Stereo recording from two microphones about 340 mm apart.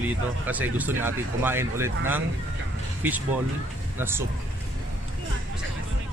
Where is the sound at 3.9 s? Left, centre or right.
Centre.